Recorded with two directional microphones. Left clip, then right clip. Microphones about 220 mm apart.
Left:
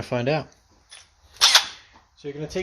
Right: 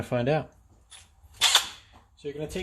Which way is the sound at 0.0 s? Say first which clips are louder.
Left 2 dB; 10° left (ahead or behind).